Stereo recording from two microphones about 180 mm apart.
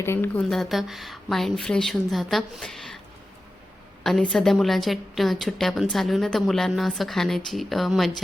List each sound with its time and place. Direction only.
0.0 s a woman's voice: 10° left (ahead or behind)
4.0 s a woman's voice: centre (ahead or behind)